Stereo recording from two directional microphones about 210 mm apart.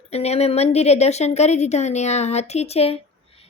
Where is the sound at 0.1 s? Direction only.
30° left (ahead or behind).